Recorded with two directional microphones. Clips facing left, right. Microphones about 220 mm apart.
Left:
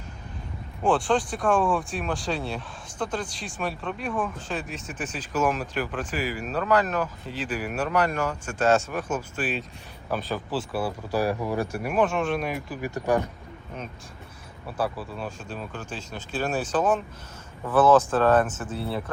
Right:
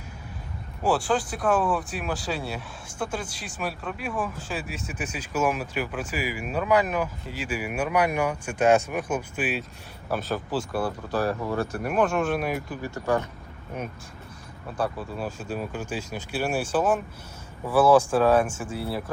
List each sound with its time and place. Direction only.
0.8 s speech: 5° right (ahead or behind); by 11.9 s 10° left (ahead or behind)
11.9 s speech: centre (ahead or behind)
12.8 s speech: 15° left (ahead or behind)
14.8 s speech: centre (ahead or behind)